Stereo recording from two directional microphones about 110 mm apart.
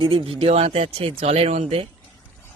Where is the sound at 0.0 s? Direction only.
50° right (ahead or behind); by 1.9 s 75° right (ahead or behind).